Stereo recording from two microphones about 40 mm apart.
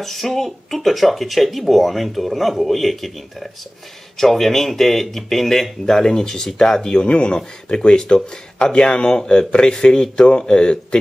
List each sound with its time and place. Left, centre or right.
0.0 s speech: centre; by 11.0 s left